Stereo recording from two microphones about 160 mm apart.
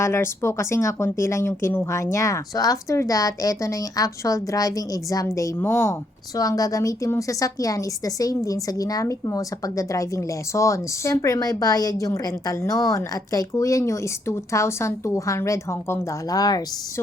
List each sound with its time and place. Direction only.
0.0 s speech: 15° left (ahead or behind)